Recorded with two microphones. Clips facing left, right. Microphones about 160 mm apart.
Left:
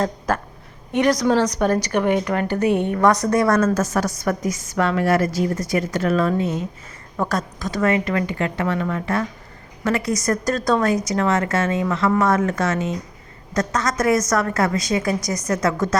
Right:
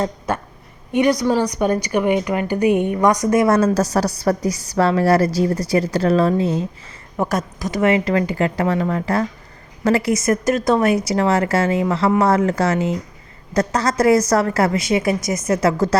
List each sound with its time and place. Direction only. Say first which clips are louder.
0.9 s a woman's voice: right 1 dB; 5° right (ahead or behind); by 6.7 s 30° right (ahead or behind)
7.2 s a woman's voice: right 2 dB; 20° right (ahead or behind)